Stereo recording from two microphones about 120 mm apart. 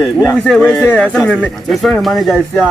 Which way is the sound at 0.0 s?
20° left (ahead or behind).